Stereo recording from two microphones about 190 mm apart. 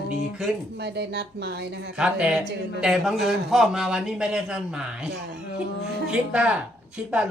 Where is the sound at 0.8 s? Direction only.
60° right (ahead or behind).